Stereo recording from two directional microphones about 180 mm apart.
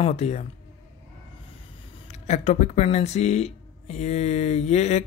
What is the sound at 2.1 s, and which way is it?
Speech, 40° left (ahead or behind).